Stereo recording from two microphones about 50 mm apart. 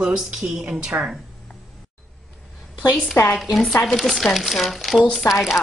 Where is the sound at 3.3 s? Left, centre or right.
Centre.